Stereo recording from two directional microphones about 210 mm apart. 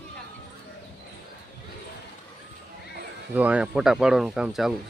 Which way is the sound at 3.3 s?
5° right (ahead or behind).